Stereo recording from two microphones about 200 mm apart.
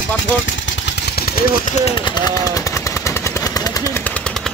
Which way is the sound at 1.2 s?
45° left (ahead or behind).